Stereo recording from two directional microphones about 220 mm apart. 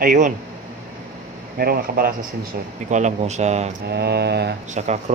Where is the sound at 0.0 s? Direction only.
35° right (ahead or behind).